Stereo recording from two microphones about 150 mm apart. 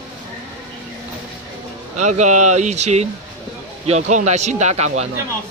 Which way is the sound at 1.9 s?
55° right (ahead or behind).